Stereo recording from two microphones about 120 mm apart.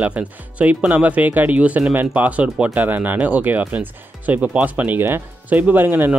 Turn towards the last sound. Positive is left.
turn(degrees=-15)  # may be behind; listen again after turning